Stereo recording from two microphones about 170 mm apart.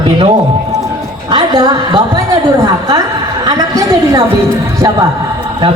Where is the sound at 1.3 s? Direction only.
25° right (ahead or behind).